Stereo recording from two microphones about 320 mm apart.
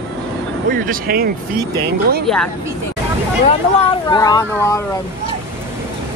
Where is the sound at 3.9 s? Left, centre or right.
Centre.